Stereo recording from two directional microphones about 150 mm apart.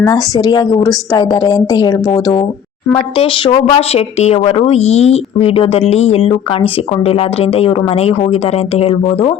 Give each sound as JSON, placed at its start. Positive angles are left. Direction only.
{"t": 0.0, "sound": "a woman's voice", "side_deg": 25}